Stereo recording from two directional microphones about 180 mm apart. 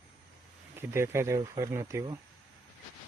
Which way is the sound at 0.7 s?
15° right (ahead or behind).